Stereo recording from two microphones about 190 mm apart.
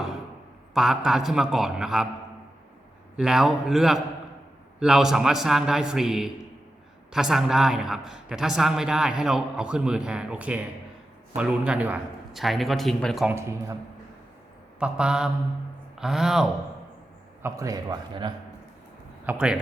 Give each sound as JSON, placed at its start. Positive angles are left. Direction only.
{"t": 0.7, "sound": "a man's voice", "side_deg": 0}
{"t": 3.2, "sound": "a man's voice", "side_deg": 0}
{"t": 14.8, "sound": "a man's voice", "side_deg": -5}
{"t": 17.4, "sound": "a man's voice", "side_deg": -15}
{"t": 19.2, "sound": "speech", "side_deg": -5}